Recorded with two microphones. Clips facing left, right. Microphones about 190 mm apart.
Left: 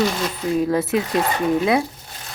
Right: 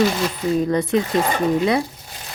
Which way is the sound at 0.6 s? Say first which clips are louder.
Even; 5° left (ahead or behind).